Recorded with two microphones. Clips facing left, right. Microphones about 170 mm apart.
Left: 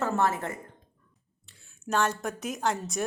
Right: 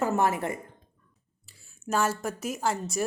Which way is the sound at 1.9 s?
5° right (ahead or behind).